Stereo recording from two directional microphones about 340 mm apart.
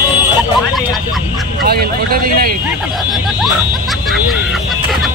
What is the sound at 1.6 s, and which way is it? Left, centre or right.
Speech, right.